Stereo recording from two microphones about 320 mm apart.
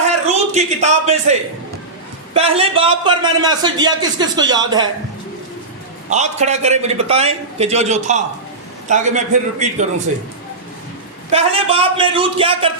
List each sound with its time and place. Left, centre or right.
0.3 s a man's voice: right
6.1 s a man's voice: right
11.3 s a man's voice: centre